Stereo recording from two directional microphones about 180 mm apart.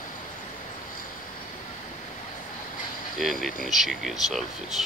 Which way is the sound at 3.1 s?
Centre (ahead or behind).